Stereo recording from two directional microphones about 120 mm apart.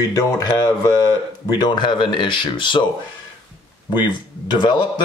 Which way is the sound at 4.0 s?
40° left (ahead or behind).